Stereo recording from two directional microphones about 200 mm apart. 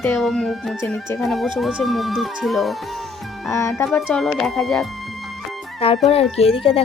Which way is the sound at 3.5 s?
15° left (ahead or behind).